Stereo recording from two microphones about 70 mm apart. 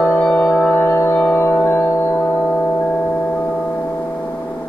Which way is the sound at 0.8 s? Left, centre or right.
Left.